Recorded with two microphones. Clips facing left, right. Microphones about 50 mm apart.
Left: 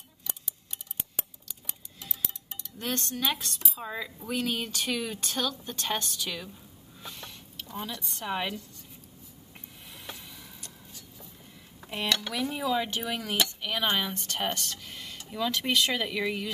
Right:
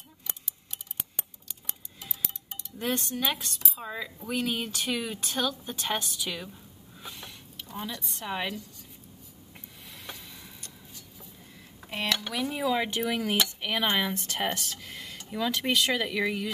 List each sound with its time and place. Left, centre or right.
2.0 s cutlery: centre
4.4 s a woman's voice: centre
7.0 s a sound: centre
10.0 s vehicle: centre
11.9 s cutlery: centre
13.1 s a woman's voice: centre
13.8 s a woman's voice: centre